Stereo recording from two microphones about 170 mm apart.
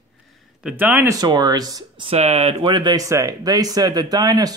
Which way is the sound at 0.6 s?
10° right (ahead or behind).